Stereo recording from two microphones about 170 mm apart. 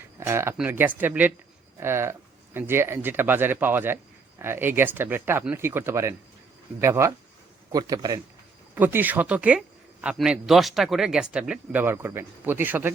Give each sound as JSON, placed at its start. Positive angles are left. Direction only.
{"t": 0.2, "sound": "a man's voice", "side_deg": -15}
{"t": 8.7, "sound": "speech", "side_deg": -10}